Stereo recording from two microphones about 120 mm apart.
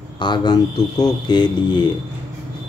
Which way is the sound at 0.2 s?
40° left (ahead or behind).